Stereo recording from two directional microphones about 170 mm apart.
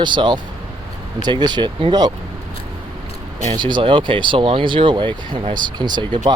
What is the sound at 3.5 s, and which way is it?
Speech, 25° right (ahead or behind).